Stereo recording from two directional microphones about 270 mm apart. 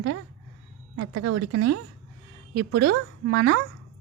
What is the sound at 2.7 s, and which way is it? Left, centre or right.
Speech, right.